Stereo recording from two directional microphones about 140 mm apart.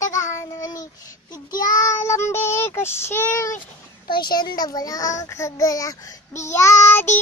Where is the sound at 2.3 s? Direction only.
15° left (ahead or behind).